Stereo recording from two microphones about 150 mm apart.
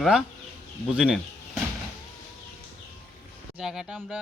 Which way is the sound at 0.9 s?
5° right (ahead or behind).